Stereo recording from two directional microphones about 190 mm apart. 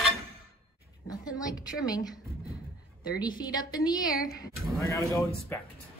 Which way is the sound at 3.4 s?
20° left (ahead or behind).